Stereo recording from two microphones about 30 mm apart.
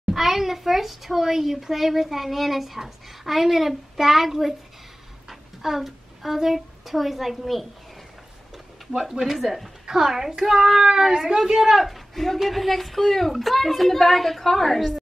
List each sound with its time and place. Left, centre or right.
0.1 s a child's voice: centre
9.8 s a child's voice: centre
11.7 s a woman's voice: centre
13.3 s a woman's voice: centre